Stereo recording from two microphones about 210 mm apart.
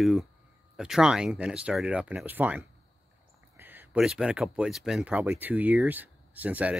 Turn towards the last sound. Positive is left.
turn(degrees=-5)  # may be behind; listen again after turning